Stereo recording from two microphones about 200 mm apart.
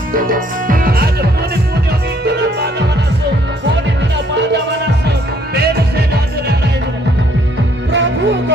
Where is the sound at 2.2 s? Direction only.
55° right (ahead or behind).